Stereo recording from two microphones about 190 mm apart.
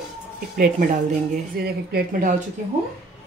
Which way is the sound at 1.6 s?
55° right (ahead or behind).